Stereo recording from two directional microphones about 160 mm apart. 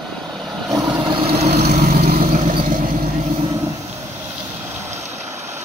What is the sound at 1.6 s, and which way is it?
Vehicle, 70° right (ahead or behind).